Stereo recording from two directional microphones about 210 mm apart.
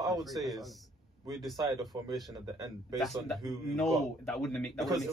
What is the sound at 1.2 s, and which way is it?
Speech, 15° right (ahead or behind).